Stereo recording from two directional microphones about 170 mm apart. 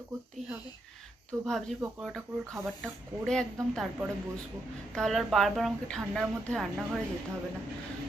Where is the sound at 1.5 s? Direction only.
5° left (ahead or behind).